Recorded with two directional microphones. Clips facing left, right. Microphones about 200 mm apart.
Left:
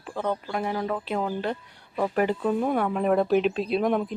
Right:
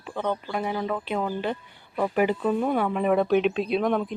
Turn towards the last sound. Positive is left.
turn(degrees=5)  # may be behind; listen again after turning